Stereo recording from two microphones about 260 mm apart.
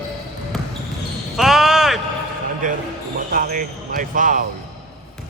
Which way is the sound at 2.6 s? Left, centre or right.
Right.